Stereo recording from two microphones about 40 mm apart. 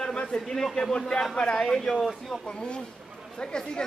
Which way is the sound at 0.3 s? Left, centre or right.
Centre.